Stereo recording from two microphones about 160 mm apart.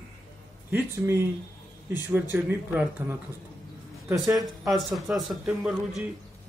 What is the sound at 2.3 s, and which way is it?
Speech, 10° right (ahead or behind).